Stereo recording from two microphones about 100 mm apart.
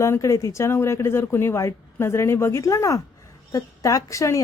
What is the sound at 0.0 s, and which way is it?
A woman's voice, 30° left (ahead or behind).